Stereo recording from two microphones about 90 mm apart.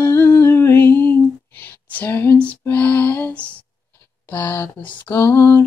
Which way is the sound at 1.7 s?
20° left (ahead or behind).